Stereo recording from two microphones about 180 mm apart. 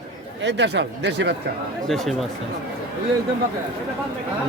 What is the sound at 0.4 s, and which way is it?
Speech, 75° right (ahead or behind).